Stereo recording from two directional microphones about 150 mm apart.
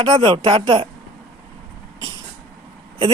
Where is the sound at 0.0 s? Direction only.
35° right (ahead or behind).